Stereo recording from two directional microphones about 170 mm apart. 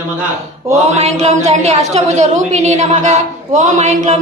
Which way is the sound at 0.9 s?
40° right (ahead or behind).